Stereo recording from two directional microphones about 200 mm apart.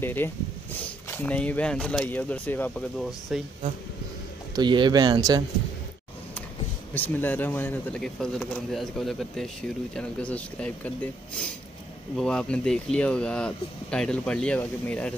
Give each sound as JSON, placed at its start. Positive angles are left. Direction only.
{"t": 0.0, "sound": "speech", "side_deg": 10}
{"t": 3.1, "sound": "speech", "side_deg": 0}
{"t": 4.6, "sound": "speech", "side_deg": -20}
{"t": 6.9, "sound": "speech", "side_deg": 10}